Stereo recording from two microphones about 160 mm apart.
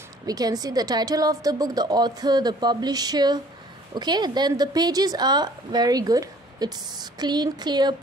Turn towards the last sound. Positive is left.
turn(degrees=-25)  # may be behind; listen again after turning